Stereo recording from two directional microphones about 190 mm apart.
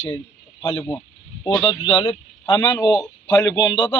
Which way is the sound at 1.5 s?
30° left (ahead or behind).